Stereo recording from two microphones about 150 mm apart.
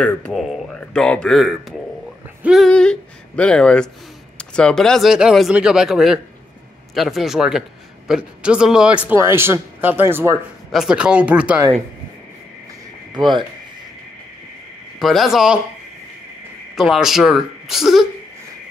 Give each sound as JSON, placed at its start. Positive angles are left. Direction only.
{"t": 0.3, "sound": "speech", "side_deg": 0}
{"t": 10.7, "sound": "speech", "side_deg": -5}
{"t": 13.1, "sound": "speech", "side_deg": -30}
{"t": 15.0, "sound": "speech", "side_deg": 0}
{"t": 16.7, "sound": "speech", "side_deg": 0}